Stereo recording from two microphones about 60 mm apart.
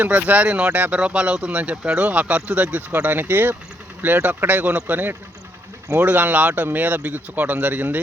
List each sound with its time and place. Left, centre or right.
0.3 s speech: right
3.0 s speech: right